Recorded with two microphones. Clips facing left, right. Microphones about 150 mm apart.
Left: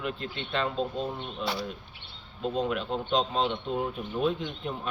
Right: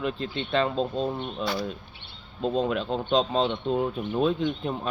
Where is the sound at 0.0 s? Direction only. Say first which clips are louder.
Right 5 dB; 30° right (ahead or behind).